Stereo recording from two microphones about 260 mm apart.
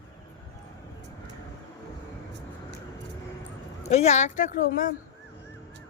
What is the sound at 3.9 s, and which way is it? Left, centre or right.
A woman's voice, left.